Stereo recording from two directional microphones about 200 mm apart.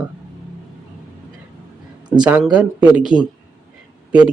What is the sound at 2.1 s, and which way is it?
Speech, 20° right (ahead or behind).